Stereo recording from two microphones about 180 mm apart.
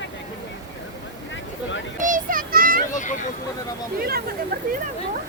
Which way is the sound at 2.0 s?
50° right (ahead or behind).